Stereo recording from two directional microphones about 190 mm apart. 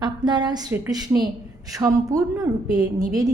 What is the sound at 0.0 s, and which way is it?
A woman's voice, 20° right (ahead or behind).